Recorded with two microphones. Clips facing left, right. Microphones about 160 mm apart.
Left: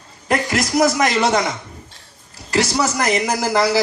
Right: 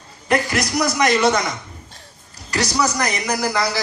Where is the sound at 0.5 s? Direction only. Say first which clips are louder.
Left 4 dB; 45° left (ahead or behind).